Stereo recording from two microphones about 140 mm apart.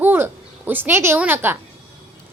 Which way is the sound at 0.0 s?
15° right (ahead or behind).